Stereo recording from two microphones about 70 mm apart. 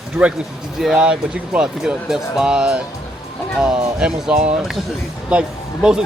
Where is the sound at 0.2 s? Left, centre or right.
Centre.